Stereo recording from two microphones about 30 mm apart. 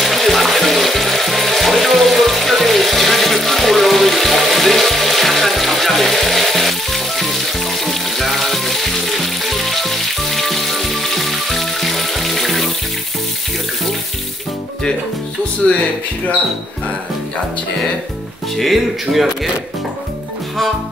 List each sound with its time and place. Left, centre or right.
0.0 s water: centre
15.6 s a sound: left
18.6 s speech: centre